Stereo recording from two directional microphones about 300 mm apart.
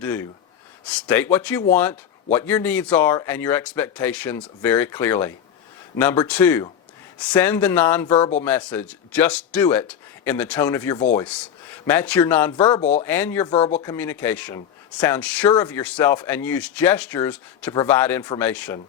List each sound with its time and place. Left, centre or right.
0.0 s speech: centre
8.1 s speech: left
8.4 s speech: centre; by 13.1 s left
13.1 s speech: centre
13.5 s speech: left
13.8 s speech: centre